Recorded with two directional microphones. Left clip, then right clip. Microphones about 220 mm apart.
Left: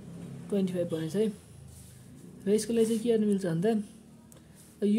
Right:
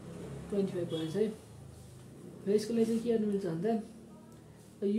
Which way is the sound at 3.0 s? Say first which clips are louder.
Left 4 dB; 40° left (ahead or behind).